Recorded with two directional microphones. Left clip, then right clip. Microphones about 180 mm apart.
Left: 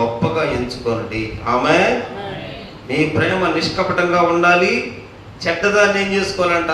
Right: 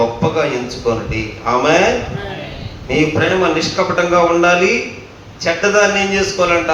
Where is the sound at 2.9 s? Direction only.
15° left (ahead or behind).